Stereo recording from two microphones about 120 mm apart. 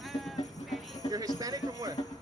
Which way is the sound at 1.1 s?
30° right (ahead or behind).